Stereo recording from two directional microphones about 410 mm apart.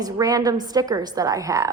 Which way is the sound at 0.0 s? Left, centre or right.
Centre.